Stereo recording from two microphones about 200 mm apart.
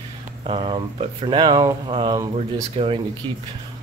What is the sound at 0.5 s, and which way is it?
Speech, 25° right (ahead or behind).